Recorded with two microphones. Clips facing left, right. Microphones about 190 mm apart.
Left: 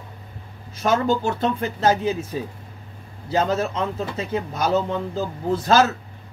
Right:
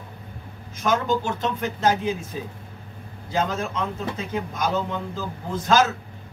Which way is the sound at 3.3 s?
35° left (ahead or behind).